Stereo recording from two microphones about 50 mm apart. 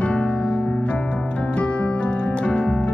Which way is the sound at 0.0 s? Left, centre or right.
Left.